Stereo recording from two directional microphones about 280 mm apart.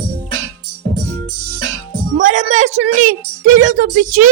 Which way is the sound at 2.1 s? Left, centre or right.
Right.